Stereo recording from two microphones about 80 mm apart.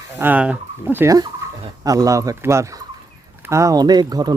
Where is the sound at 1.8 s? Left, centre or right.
Right.